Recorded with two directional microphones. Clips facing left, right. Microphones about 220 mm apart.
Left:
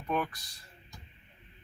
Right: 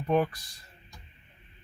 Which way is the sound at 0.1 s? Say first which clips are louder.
Right 7 dB; 30° right (ahead or behind).